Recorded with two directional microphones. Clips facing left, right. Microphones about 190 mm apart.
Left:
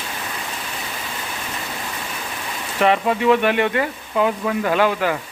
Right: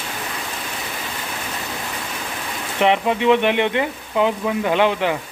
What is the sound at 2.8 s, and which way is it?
Speech, 20° right (ahead or behind).